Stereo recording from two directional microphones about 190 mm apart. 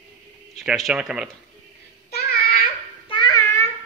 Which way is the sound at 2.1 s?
55° left (ahead or behind).